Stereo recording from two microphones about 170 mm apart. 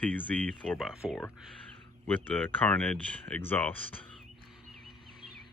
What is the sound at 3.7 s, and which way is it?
Speech, 35° left (ahead or behind).